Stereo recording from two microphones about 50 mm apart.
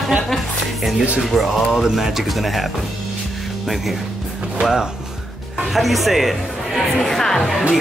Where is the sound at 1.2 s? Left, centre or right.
Centre.